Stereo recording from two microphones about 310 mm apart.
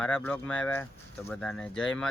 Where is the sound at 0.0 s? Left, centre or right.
Centre.